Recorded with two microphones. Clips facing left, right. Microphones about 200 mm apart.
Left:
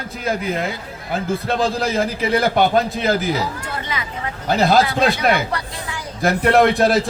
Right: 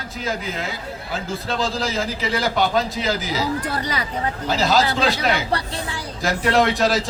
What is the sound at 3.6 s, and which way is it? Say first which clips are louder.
Speech: right 3 dB; 35° right (ahead or behind).